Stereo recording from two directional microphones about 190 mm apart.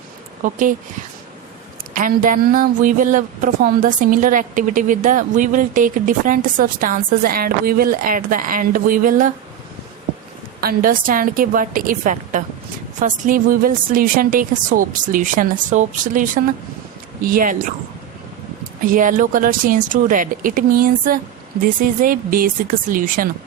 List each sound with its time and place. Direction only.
0.4 s a woman's voice: 40° right (ahead or behind)
1.9 s a woman's voice: 45° right (ahead or behind)
10.6 s a woman's voice: 50° right (ahead or behind)
18.9 s a woman's voice: 45° right (ahead or behind)